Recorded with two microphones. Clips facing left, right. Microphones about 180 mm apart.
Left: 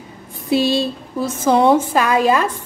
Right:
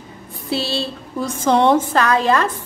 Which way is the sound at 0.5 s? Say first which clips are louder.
Left 6 dB; 15° left (ahead or behind).